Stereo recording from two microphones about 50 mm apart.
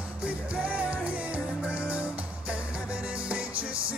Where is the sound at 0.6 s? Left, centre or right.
Right.